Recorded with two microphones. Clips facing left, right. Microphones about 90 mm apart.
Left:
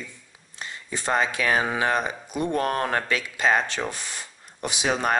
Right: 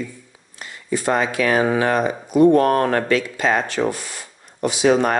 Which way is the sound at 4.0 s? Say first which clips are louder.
Right 2 dB; 15° right (ahead or behind).